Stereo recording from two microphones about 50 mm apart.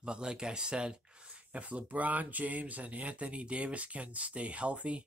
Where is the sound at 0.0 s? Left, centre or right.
Centre.